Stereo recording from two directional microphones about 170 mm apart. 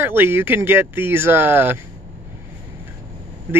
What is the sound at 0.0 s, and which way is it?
Speech, 15° right (ahead or behind).